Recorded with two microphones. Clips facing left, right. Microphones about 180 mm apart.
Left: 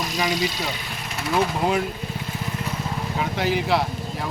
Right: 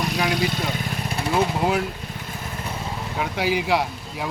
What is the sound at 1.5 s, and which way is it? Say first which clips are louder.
Speech: even; 5° right (ahead or behind).